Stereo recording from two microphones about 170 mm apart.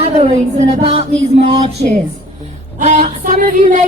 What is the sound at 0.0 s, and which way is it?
Speech, 40° right (ahead or behind).